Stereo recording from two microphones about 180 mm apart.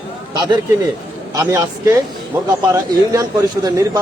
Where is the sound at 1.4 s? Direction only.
15° right (ahead or behind).